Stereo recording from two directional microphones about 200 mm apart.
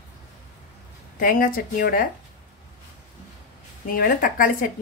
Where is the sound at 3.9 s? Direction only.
45° left (ahead or behind).